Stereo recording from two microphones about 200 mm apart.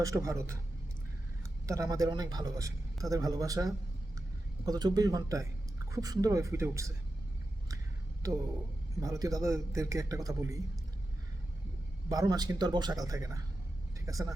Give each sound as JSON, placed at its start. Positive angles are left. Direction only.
{"t": 0.0, "sound": "a man's voice", "side_deg": -15}
{"t": 1.6, "sound": "a man's voice", "side_deg": -15}
{"t": 9.0, "sound": "a man's voice", "side_deg": -20}
{"t": 12.0, "sound": "speech", "side_deg": -20}